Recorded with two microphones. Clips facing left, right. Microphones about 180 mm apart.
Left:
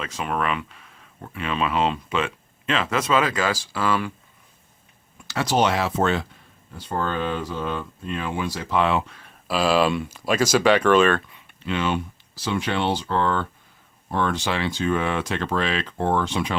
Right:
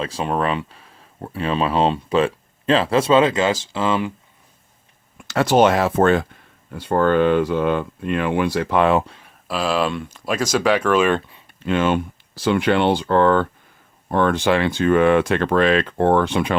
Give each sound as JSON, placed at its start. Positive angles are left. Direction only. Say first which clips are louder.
{"t": 0.0, "sound": "speech", "louder": "right 5 dB", "side_deg": -30}
{"t": 5.3, "sound": "speech", "louder": "right 6 dB", "side_deg": -55}
{"t": 9.5, "sound": "speech", "louder": "left 1 dB", "side_deg": 0}
{"t": 11.6, "sound": "speech", "louder": "right 6 dB", "side_deg": -50}